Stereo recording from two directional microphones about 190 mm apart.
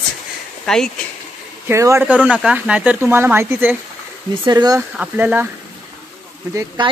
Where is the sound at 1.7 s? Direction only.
15° right (ahead or behind).